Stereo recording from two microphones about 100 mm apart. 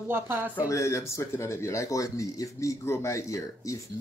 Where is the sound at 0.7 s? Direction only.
30° left (ahead or behind).